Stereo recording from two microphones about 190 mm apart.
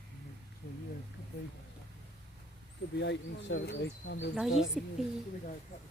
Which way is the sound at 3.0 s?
65° left (ahead or behind).